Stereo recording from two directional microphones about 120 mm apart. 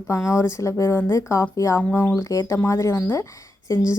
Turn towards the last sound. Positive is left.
turn(degrees=25)  # may be behind; listen again after turning